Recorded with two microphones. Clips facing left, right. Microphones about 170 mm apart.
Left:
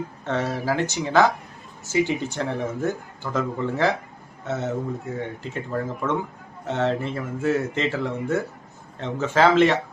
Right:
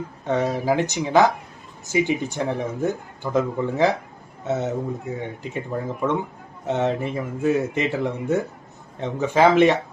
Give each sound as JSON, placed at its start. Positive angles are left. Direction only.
{"t": 0.3, "sound": "speech", "side_deg": -15}